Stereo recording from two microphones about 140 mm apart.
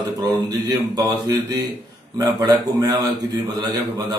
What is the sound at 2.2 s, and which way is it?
Speech, 30° right (ahead or behind).